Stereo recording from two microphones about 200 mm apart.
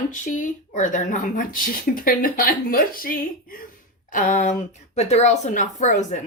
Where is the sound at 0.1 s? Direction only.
40° left (ahead or behind).